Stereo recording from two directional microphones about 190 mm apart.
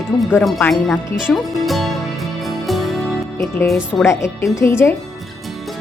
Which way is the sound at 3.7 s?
Centre (ahead or behind).